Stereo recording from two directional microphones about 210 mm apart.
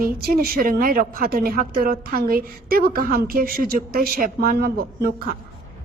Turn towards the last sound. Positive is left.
turn(degrees=-45)  # may be behind; listen again after turning